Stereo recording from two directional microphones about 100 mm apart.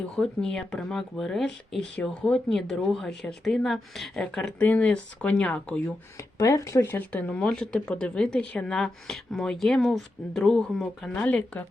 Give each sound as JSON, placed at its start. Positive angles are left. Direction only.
{"t": 0.2, "sound": "speech", "side_deg": 5}
{"t": 6.1, "sound": "speech", "side_deg": 30}
{"t": 6.8, "sound": "speech", "side_deg": 20}
{"t": 11.1, "sound": "speech", "side_deg": 15}